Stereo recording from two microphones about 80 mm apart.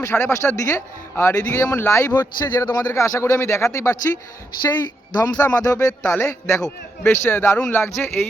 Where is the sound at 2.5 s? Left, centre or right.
Left.